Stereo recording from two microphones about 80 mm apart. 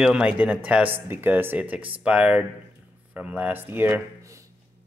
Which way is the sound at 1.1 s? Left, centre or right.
Right.